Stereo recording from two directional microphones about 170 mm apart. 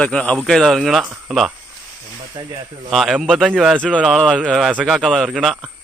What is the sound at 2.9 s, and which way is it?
A man's voice, centre (ahead or behind).